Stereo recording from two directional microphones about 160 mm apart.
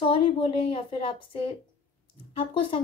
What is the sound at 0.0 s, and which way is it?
A woman's voice, 35° left (ahead or behind).